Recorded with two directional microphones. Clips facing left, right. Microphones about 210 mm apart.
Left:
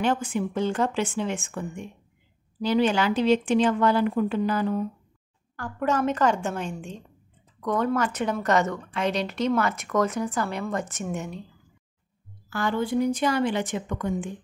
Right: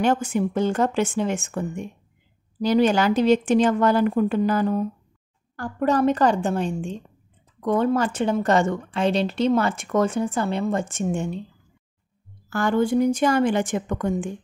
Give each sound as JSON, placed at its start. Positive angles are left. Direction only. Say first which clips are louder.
{"t": 0.0, "sound": "speech", "louder": "right 4 dB", "side_deg": -45}
{"t": 5.6, "sound": "a woman's voice", "louder": "right 5 dB", "side_deg": -35}
{"t": 12.4, "sound": "speech", "louder": "right 5 dB", "side_deg": -45}